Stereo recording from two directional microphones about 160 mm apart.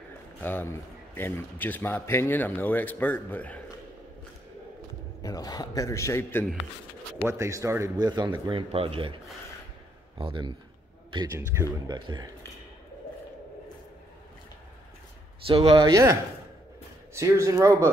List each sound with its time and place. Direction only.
0.4 s a man's voice: 10° left (ahead or behind)
5.2 s a man's voice: 25° left (ahead or behind)
7.2 s speech: 20° right (ahead or behind); by 9.1 s 35° right (ahead or behind)
10.1 s speech: 30° right (ahead or behind)
11.9 s speech: 25° right (ahead or behind)
15.4 s speech: 35° right (ahead or behind)